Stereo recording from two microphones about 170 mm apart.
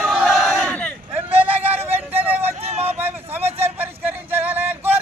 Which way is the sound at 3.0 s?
10° right (ahead or behind).